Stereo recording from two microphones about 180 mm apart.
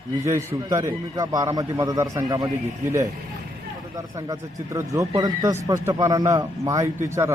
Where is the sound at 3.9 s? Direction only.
20° right (ahead or behind).